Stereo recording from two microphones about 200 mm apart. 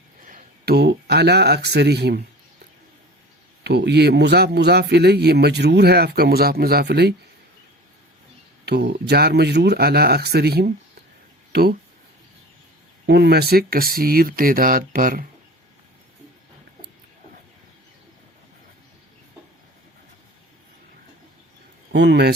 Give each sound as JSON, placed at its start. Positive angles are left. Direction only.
{"t": 0.2, "sound": "speech", "side_deg": -40}
{"t": 3.6, "sound": "a man's voice", "side_deg": -55}
{"t": 8.6, "sound": "speech", "side_deg": -55}
{"t": 13.1, "sound": "speech", "side_deg": -55}
{"t": 21.9, "sound": "a man's voice", "side_deg": -55}